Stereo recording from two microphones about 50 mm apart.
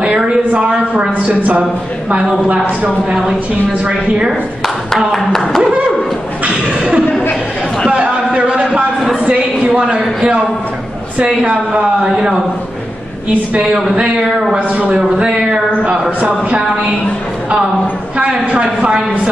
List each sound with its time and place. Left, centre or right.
0.6 s a woman's voice: right
4.9 s speech: centre
7.9 s a sound: right
9.1 s a woman's voice: right
14.7 s a woman's voice: right
18.1 s a woman's voice: right